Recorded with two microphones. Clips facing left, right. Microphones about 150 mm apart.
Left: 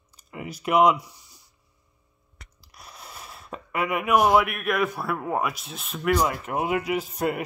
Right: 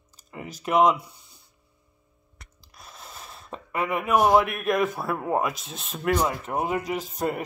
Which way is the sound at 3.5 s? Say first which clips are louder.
Even; 30° right (ahead or behind).